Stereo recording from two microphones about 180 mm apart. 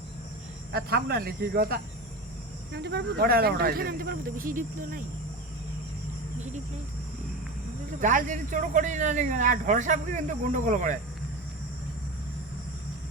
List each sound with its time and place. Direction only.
0.7 s speech: 60° right (ahead or behind)
8.0 s speech: 45° right (ahead or behind)